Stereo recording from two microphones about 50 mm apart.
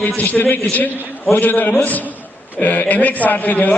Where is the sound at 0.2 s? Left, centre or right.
Left.